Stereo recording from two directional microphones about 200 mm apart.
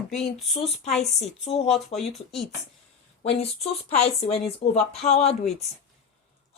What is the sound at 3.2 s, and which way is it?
Speech, 30° left (ahead or behind).